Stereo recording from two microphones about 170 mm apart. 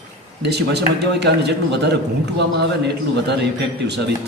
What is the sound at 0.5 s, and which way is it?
A man's voice, 80° right.